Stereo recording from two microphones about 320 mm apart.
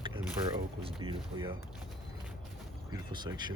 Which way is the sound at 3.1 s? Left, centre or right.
Centre.